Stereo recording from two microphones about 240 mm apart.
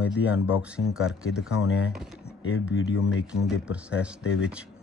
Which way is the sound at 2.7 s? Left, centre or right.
Left.